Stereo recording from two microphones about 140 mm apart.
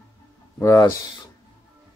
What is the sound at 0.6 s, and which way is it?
Speech, 20° left (ahead or behind).